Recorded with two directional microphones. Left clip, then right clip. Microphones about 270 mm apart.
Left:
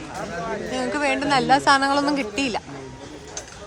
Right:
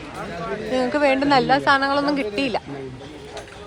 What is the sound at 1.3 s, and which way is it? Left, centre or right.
Speech, centre.